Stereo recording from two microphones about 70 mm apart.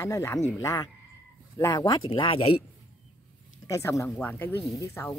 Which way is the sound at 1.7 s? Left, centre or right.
Left.